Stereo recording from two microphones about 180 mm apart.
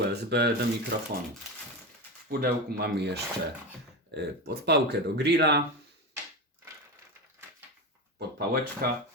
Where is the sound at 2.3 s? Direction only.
60° right (ahead or behind).